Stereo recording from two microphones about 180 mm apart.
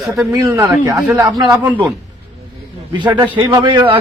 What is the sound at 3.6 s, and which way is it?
Speech, 25° right (ahead or behind).